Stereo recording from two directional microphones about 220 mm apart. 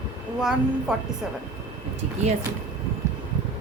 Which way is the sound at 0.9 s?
5° right (ahead or behind).